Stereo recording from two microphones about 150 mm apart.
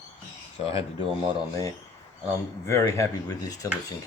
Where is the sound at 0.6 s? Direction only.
40° left (ahead or behind).